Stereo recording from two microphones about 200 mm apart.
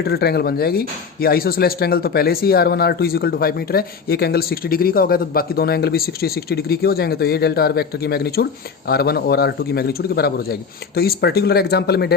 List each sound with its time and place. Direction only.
0.0 s speech: 55° left (ahead or behind)